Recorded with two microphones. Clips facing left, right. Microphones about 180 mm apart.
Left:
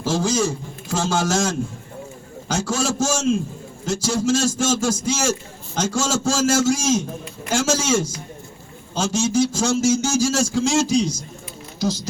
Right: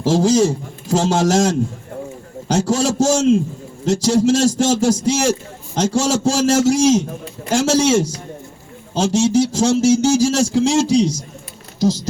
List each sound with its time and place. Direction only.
0.0 s a man's voice: 35° right (ahead or behind)